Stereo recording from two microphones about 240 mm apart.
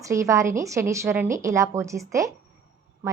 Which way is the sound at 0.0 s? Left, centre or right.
Centre.